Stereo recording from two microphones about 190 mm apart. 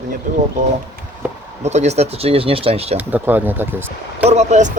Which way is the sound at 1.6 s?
35° right (ahead or behind).